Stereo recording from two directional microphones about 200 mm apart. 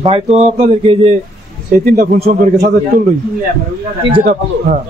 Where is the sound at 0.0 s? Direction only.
30° right (ahead or behind).